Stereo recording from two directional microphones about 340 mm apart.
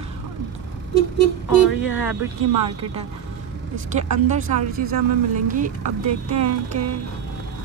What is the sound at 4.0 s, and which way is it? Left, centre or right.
Speech, right.